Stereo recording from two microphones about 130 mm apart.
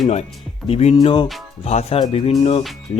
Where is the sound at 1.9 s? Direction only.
45° left (ahead or behind).